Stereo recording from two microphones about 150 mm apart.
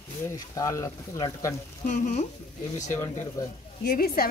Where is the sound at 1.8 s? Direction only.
60° left (ahead or behind).